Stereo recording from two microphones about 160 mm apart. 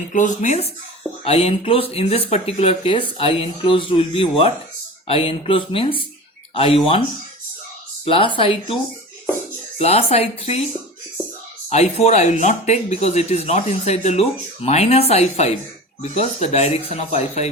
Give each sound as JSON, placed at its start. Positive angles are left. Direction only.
{"t": 0.1, "sound": "speech", "side_deg": 50}
{"t": 8.0, "sound": "speech", "side_deg": 35}
{"t": 9.7, "sound": "speech", "side_deg": 40}
{"t": 11.7, "sound": "speech", "side_deg": 40}